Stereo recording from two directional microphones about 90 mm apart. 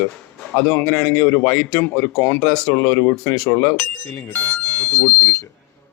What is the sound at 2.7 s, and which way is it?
Speech, 30° left (ahead or behind).